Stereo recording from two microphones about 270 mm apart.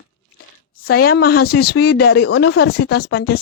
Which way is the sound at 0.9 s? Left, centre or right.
Left.